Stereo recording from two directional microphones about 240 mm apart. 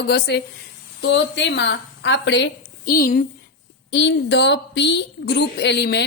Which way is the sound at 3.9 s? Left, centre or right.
Left.